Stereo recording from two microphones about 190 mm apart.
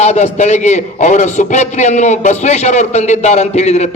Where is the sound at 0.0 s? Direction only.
35° left (ahead or behind).